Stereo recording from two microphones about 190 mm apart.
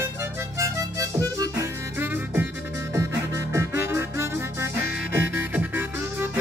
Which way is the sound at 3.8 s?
15° right (ahead or behind).